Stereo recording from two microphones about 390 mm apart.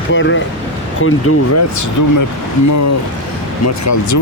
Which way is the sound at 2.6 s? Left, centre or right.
Left.